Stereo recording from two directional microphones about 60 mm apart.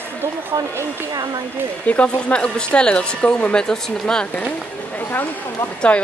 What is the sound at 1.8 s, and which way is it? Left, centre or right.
Speech, left.